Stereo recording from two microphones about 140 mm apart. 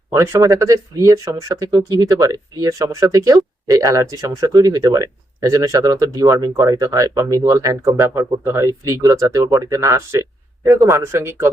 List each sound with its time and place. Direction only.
0.1 s speech: 20° right (ahead or behind)